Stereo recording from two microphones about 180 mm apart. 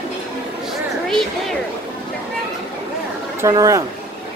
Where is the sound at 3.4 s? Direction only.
20° right (ahead or behind).